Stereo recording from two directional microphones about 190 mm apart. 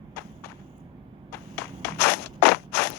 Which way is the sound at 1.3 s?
10° left (ahead or behind).